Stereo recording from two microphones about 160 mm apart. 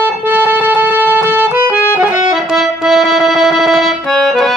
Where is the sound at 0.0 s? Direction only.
10° right (ahead or behind).